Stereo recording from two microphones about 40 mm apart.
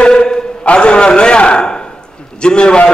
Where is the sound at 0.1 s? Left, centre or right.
Centre.